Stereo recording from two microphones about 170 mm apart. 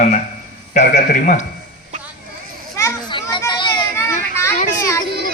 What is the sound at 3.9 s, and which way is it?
Children playing, 15° left (ahead or behind).